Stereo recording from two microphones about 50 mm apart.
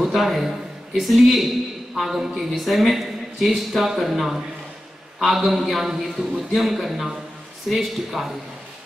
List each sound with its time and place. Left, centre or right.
0.0 s a man's voice: centre